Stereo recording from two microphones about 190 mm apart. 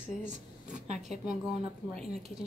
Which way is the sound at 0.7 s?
35° right (ahead or behind).